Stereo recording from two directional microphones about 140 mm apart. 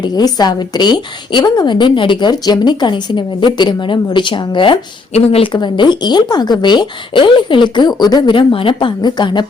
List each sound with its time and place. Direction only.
0.0 s a woman's voice: 30° left (ahead or behind)
5.1 s a woman's voice: 45° left (ahead or behind)